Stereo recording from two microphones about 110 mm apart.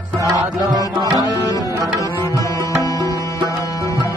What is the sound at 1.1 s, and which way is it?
Tabla, 30° left (ahead or behind).